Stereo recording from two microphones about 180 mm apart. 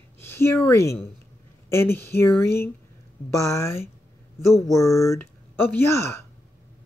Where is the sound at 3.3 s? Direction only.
15° left (ahead or behind).